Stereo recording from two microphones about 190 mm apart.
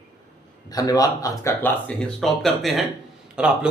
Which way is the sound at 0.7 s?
20° left (ahead or behind).